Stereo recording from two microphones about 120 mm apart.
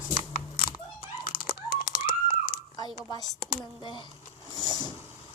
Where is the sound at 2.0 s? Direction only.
45° left (ahead or behind).